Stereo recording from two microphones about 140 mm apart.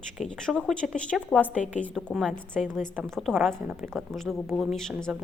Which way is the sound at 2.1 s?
5° right (ahead or behind).